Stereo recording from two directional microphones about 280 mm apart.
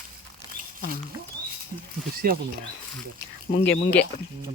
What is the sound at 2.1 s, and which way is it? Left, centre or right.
Speech, right.